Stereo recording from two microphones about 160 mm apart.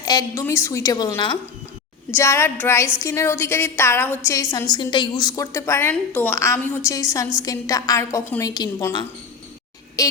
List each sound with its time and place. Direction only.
0.0 s a woman's voice: 25° left (ahead or behind)
4.7 s a woman's voice: 30° left (ahead or behind)